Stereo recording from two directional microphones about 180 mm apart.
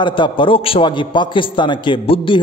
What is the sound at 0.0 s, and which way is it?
A man's voice, 25° left (ahead or behind).